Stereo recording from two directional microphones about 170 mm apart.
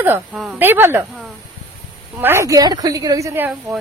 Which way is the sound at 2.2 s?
15° right (ahead or behind).